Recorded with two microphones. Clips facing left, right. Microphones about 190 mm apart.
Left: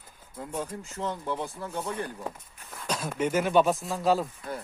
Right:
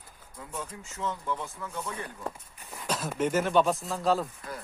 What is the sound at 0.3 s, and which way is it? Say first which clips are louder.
Speech: left 5 dB; 40° left (ahead or behind).